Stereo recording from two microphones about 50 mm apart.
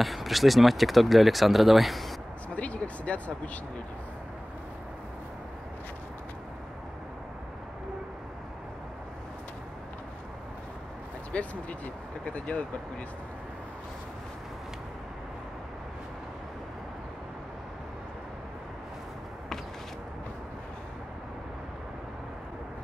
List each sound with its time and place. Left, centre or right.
0.0 s speech: centre
2.5 s vehicle: left
11.3 s speech: left